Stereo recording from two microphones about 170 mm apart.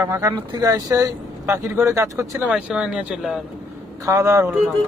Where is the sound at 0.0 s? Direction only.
15° right (ahead or behind).